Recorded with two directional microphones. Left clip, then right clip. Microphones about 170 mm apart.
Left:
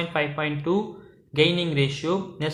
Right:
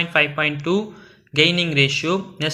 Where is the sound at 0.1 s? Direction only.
15° right (ahead or behind).